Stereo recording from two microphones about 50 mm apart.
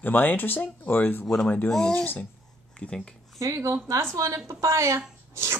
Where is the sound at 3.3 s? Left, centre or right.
Right.